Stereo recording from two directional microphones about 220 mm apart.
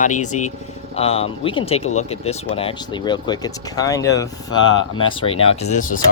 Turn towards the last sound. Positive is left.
turn(degrees=35)  # may be behind; listen again after turning